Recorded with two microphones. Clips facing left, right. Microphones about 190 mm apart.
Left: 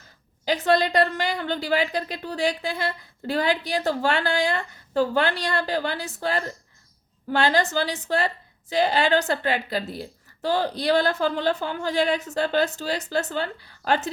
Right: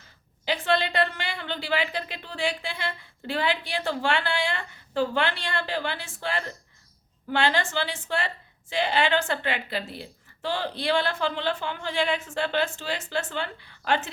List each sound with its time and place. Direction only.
0.4 s speech: 40° left (ahead or behind)